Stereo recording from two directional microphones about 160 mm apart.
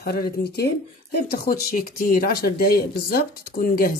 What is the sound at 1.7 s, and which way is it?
Speech, 65° left (ahead or behind).